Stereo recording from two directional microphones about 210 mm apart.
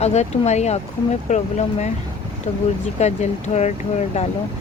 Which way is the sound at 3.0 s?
30° left (ahead or behind).